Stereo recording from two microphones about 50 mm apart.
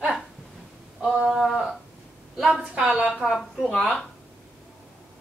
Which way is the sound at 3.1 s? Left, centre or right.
Centre.